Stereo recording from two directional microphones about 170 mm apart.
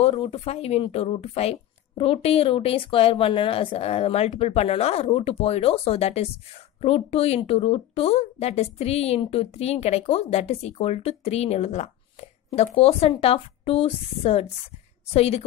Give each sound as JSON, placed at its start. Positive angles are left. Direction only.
{"t": 0.0, "sound": "a woman's voice", "side_deg": 35}